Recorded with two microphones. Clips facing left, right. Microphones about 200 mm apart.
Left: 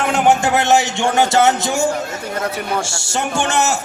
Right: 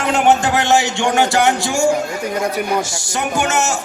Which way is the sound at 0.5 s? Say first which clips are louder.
Even; 20° left (ahead or behind).